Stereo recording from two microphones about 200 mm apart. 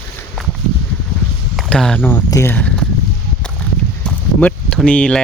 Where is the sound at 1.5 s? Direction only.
Centre (ahead or behind).